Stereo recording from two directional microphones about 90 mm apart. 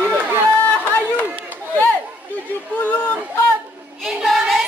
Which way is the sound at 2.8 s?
20° left (ahead or behind).